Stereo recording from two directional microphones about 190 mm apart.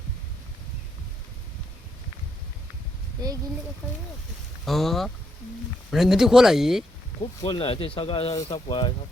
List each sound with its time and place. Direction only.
4.6 s speech: centre (ahead or behind)
7.2 s speech: 25° left (ahead or behind)